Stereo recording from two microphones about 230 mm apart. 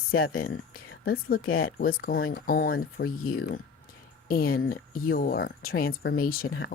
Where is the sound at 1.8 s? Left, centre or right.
Left.